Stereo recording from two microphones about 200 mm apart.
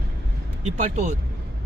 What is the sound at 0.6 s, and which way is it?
Speech, 35° right (ahead or behind).